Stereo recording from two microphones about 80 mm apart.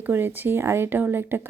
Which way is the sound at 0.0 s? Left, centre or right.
Right.